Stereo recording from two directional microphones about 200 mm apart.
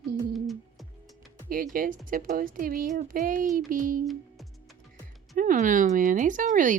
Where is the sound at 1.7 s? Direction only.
45° right (ahead or behind).